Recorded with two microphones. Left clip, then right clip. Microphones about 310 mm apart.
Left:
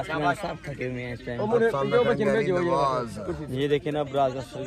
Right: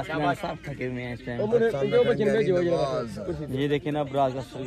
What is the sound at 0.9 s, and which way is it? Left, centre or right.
Speech, right.